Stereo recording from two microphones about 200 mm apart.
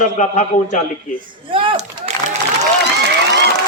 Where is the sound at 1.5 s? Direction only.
25° right (ahead or behind).